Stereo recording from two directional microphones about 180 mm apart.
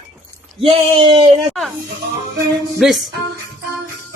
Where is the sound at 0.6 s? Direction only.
30° right (ahead or behind).